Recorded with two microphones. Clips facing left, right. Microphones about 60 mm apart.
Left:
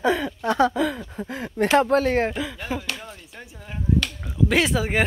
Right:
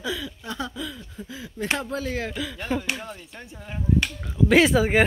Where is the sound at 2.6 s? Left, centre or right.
Centre.